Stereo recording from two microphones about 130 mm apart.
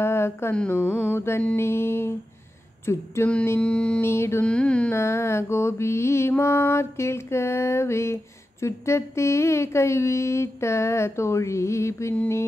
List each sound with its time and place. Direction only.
0.0 s speech: 20° left (ahead or behind)
0.6 s mantra: 15° left (ahead or behind)
4.0 s mantra: 20° left (ahead or behind)
4.5 s mantra: 10° left (ahead or behind)
4.9 s mantra: 20° left (ahead or behind)